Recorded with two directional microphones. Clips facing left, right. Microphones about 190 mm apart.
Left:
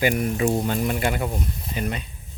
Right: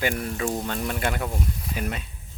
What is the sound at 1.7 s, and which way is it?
Speech, 5° right (ahead or behind).